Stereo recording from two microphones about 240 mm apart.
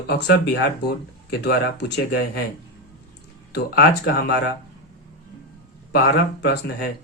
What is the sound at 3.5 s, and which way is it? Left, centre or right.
Speech, left.